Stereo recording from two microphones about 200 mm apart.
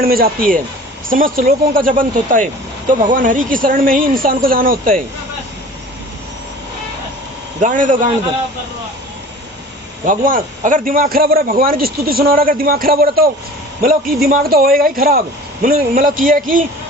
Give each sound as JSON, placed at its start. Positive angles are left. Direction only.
{"t": 0.0, "sound": "a man's voice", "side_deg": -50}
{"t": 7.6, "sound": "speech", "side_deg": -40}
{"t": 10.1, "sound": "a man's voice", "side_deg": -45}